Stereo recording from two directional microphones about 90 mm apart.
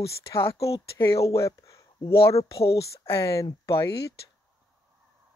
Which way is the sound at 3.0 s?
30° left (ahead or behind).